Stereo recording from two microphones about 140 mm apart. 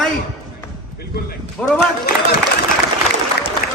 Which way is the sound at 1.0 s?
90° left.